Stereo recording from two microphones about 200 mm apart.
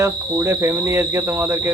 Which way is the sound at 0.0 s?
15° right (ahead or behind).